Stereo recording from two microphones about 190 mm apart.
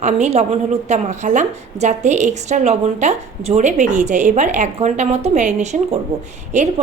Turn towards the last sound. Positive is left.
turn(degrees=-35)  # may be behind; listen again after turning